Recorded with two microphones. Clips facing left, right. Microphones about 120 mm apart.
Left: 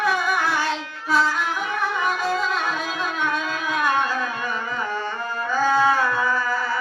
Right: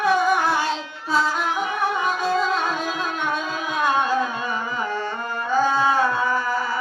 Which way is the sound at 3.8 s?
20° right (ahead or behind).